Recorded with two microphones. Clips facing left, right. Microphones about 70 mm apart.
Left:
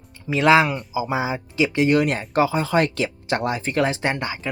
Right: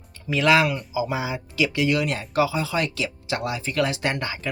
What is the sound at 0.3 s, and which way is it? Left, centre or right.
Speech, left.